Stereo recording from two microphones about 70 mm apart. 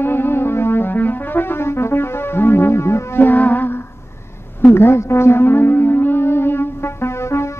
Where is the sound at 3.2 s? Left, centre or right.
Left.